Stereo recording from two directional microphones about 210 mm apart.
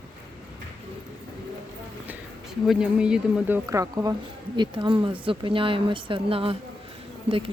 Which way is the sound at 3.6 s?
15° right (ahead or behind).